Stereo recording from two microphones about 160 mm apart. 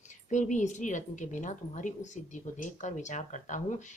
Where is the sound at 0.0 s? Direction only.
50° left (ahead or behind).